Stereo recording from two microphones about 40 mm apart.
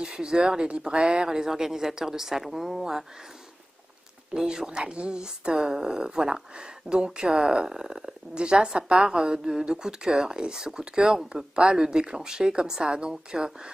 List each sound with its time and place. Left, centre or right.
0.0 s speech: centre
4.4 s speech: centre